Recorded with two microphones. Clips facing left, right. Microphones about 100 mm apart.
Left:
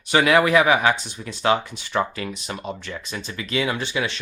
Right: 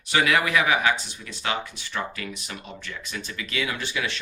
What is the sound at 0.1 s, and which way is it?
Speech, 35° left (ahead or behind).